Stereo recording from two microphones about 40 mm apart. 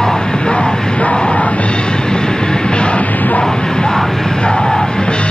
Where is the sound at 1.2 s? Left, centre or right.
Left.